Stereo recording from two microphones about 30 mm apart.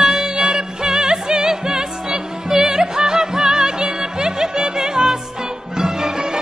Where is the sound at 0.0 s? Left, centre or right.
Centre.